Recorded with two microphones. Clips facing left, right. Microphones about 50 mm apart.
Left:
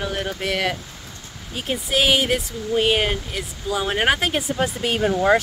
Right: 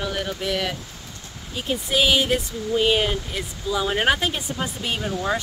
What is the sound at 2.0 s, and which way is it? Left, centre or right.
Speech, left.